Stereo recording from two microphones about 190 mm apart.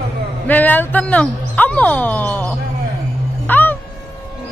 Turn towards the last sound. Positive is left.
turn(degrees=10)  # may be behind; listen again after turning